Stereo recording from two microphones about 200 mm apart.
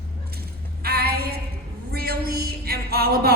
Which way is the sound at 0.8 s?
50° right (ahead or behind).